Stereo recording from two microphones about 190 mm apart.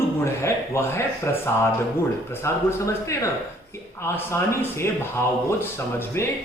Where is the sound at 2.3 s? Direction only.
15° left (ahead or behind).